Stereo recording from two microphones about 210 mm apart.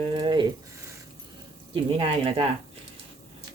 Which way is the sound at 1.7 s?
25° right (ahead or behind).